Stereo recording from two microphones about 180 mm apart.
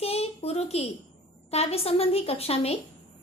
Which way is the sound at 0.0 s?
35° left (ahead or behind).